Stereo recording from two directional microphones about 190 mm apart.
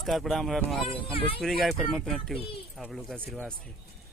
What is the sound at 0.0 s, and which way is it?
Speech, centre (ahead or behind).